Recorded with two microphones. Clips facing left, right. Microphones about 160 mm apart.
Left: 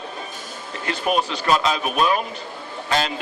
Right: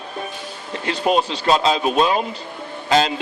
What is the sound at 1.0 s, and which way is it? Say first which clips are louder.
A man's voice: right 3 dB; 30° right (ahead or behind).